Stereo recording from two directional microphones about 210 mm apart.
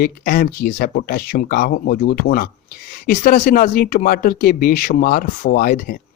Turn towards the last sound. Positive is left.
turn(degrees=45)  # may be behind; listen again after turning